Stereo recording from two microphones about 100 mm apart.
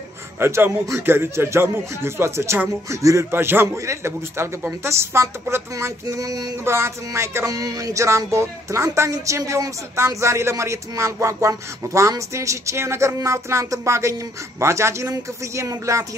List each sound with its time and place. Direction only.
0.4 s speech: 25° right (ahead or behind)
6.6 s speech: 25° right (ahead or behind)